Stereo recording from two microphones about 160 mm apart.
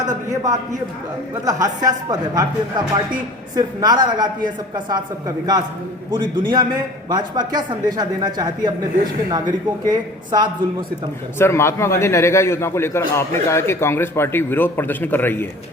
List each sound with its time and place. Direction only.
0.1 s a man's voice: 20° right (ahead or behind)
6.3 s speech: 30° right (ahead or behind)
11.3 s a man's voice: 15° left (ahead or behind)